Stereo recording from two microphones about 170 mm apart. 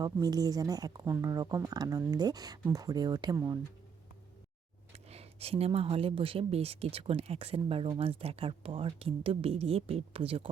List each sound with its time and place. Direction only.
0.0 s speech: 20° right (ahead or behind)
5.0 s speech: 35° right (ahead or behind)